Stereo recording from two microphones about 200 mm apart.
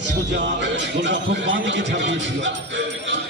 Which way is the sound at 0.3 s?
65° right (ahead or behind).